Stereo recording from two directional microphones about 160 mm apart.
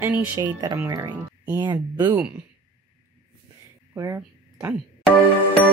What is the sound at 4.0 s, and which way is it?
Speech, 15° right (ahead or behind).